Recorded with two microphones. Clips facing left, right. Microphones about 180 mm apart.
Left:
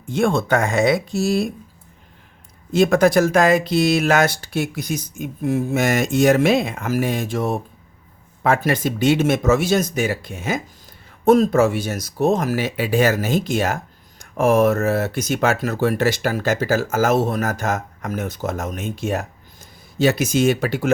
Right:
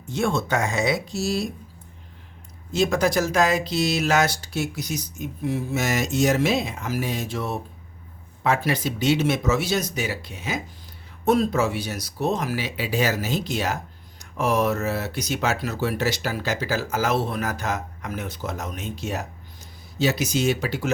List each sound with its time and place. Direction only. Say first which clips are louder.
0.1 s speech: left 5 dB; 55° left (ahead or behind)
2.7 s speech: left 6 dB; 55° left (ahead or behind)